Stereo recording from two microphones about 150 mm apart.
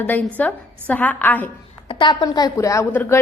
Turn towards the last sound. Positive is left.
turn(degrees=15)  # may be behind; listen again after turning